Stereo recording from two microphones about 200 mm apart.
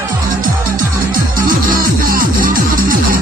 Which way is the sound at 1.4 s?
45° right (ahead or behind).